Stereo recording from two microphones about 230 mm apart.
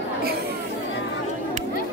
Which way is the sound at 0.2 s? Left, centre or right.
Right.